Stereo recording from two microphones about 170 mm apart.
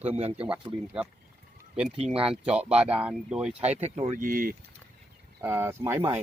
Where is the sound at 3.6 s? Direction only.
40° right (ahead or behind).